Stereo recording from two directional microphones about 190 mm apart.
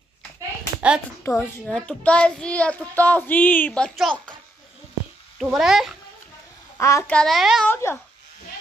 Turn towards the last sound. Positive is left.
turn(degrees=15)  # may be behind; listen again after turning